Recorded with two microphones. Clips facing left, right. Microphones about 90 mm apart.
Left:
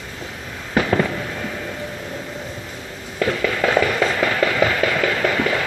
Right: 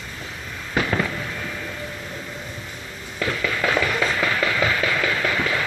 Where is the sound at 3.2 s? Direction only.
45° left (ahead or behind).